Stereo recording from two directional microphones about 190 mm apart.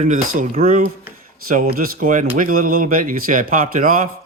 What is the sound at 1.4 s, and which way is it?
Speech, 50° right (ahead or behind).